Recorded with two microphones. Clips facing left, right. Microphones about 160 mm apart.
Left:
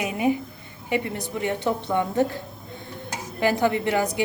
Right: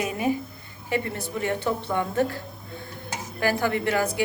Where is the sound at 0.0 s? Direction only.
20° left (ahead or behind).